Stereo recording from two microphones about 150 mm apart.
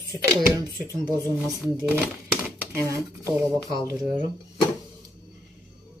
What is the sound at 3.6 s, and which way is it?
Speech, 25° right (ahead or behind).